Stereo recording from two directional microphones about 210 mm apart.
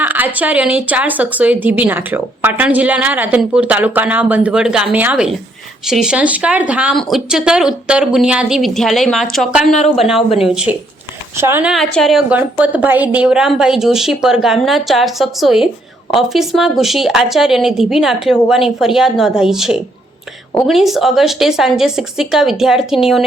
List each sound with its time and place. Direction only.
0.0 s a sound: 10° right (ahead or behind)
0.3 s a woman's voice: 5° right (ahead or behind)
10.2 s speech: 30° left (ahead or behind)
10.4 s a woman's voice: 5° right (ahead or behind)